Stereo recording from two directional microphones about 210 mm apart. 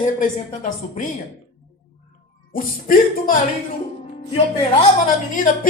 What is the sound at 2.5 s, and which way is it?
Speech, 40° left (ahead or behind).